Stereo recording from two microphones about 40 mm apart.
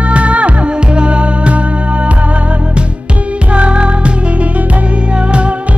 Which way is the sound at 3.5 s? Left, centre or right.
Right.